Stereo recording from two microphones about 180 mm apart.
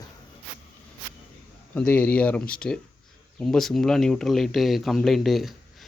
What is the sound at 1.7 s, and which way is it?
Speech, 10° left (ahead or behind).